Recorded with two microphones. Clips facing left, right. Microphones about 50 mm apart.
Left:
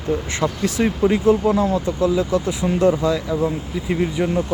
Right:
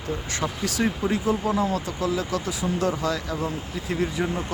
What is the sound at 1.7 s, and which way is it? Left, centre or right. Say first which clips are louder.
Speech: left 7 dB; left.